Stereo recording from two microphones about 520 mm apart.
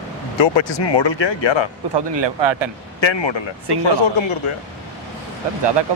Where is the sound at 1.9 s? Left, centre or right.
Right.